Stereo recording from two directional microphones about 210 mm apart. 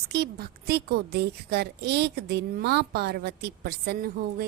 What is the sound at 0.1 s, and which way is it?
A woman's voice, 50° right (ahead or behind).